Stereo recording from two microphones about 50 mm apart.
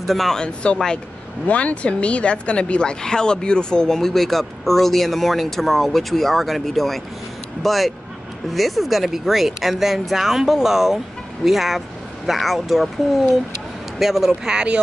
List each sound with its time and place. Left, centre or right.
0.0 s speech: centre
0.4 s speech: centre